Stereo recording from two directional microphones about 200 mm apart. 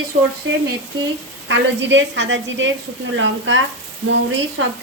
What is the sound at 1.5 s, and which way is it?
Speech, 65° right (ahead or behind).